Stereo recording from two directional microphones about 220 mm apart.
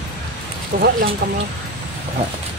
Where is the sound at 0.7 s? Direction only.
40° right (ahead or behind).